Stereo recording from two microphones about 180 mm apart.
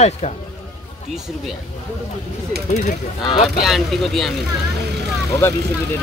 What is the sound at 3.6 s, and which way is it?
Speech, centre (ahead or behind).